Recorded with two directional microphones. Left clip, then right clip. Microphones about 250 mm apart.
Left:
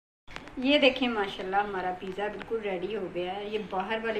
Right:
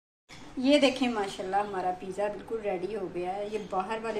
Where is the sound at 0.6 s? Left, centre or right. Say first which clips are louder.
Left 1 dB; right.